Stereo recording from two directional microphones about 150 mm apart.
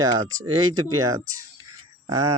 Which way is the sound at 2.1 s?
25° right (ahead or behind).